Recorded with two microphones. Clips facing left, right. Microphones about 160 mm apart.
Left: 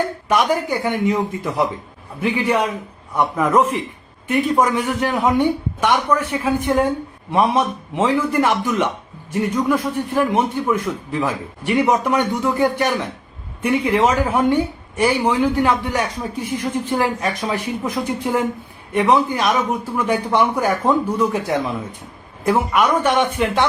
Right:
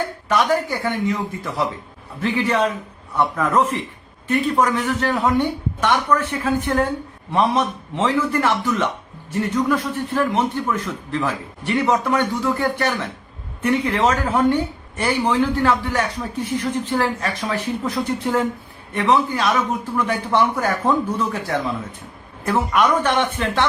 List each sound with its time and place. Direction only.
0.3 s a woman's voice: 15° left (ahead or behind)